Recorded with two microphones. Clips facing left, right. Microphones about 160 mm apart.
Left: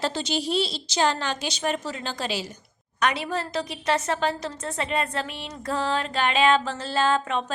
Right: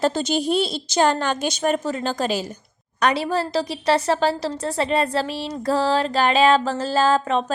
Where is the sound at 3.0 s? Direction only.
35° right (ahead or behind).